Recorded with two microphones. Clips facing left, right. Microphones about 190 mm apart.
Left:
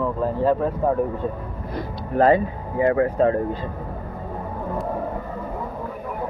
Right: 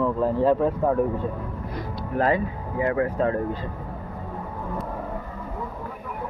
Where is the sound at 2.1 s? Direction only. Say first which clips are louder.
Left 6 dB; 30° left (ahead or behind).